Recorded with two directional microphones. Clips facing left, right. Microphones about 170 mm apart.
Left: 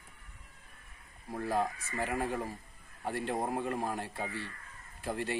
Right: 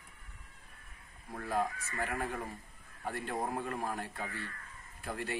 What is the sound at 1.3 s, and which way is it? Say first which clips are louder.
A man's voice: left 2 dB; 25° left (ahead or behind).